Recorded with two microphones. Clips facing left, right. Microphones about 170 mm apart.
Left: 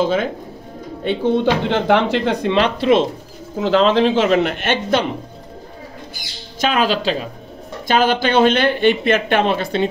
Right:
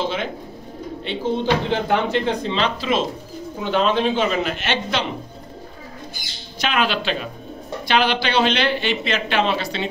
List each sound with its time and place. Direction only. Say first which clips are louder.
0.0 s speech: left 7 dB; 45° left (ahead or behind)
1.0 s speech: left 6 dB; 60° left (ahead or behind)
3.6 s speech: left 5 dB; 90° left; by 5.0 s 50° left (ahead or behind)
6.7 s speech: left 3 dB; 40° left (ahead or behind)